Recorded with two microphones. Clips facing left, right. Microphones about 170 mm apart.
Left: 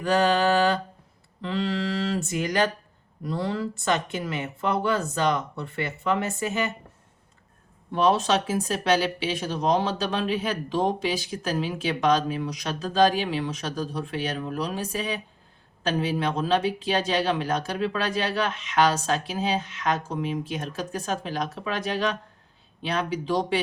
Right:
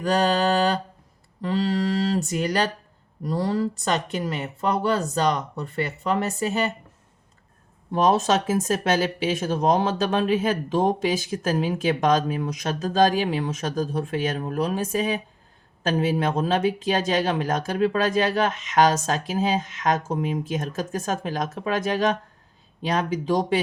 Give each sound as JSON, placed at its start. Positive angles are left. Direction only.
{"t": 0.0, "sound": "speech", "side_deg": -35}
{"t": 1.4, "sound": "a sound", "side_deg": -40}
{"t": 3.2, "sound": "speech", "side_deg": -40}
{"t": 7.9, "sound": "speech", "side_deg": -45}